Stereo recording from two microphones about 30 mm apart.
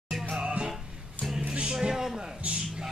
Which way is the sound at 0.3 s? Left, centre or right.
Right.